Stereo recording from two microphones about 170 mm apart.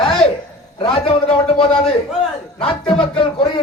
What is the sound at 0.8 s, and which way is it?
A man's voice, 30° left (ahead or behind).